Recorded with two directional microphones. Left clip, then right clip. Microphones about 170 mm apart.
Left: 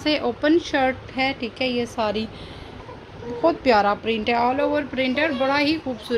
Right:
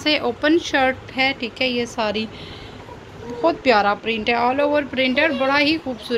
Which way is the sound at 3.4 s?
20° left (ahead or behind).